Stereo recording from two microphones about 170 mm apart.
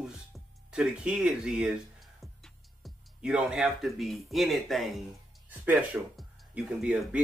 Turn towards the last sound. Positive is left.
turn(degrees=-5)  # may be behind; listen again after turning